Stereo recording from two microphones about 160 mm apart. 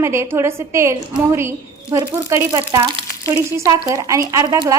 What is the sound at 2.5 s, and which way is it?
Speech, 20° right (ahead or behind).